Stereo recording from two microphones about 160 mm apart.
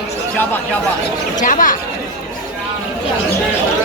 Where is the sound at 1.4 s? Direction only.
55° left (ahead or behind).